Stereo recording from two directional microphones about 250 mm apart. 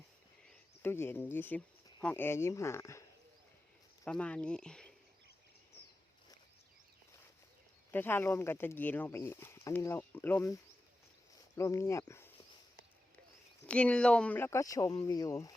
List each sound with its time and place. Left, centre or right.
0.4 s speech: centre
4.0 s speech: centre
7.9 s speech: centre
13.7 s speech: centre